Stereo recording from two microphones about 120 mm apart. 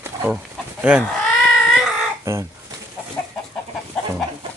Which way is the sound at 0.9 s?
10° right (ahead or behind).